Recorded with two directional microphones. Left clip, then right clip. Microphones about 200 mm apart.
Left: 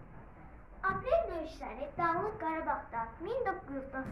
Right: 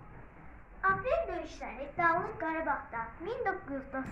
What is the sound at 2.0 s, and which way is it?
A woman's voice, 30° right (ahead or behind).